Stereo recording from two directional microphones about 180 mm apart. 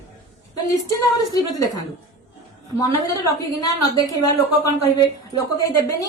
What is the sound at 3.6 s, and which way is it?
Speech, 20° left (ahead or behind).